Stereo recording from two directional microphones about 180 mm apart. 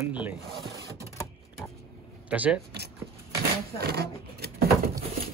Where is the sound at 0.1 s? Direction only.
10° right (ahead or behind).